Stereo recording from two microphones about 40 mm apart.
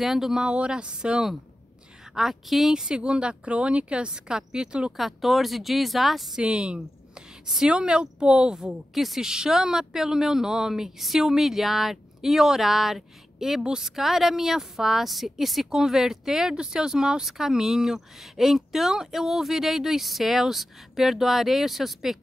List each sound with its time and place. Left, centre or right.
0.0 s a woman's voice: centre
0.5 s speech: right
2.1 s a woman's voice: centre
2.7 s a woman's voice: centre
4.9 s speech: centre
6.3 s speech: right
7.4 s a woman's voice: centre
7.7 s speech: right
8.6 s a woman's voice: centre
13.8 s a woman's voice: centre